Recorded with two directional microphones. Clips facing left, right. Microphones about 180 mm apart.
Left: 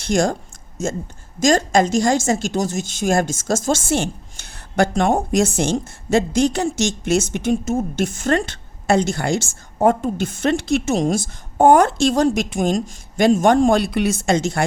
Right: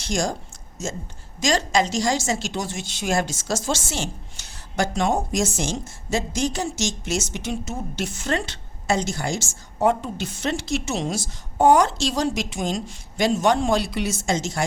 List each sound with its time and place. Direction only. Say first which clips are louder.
0.0 s a woman's voice: left 7 dB; 60° left (ahead or behind)